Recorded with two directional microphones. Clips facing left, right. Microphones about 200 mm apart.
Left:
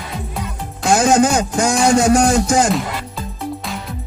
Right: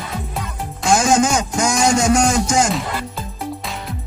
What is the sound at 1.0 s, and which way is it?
Music, 35° left (ahead or behind).